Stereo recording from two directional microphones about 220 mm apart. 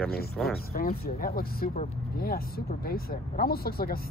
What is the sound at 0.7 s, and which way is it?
Speech, 40° left (ahead or behind).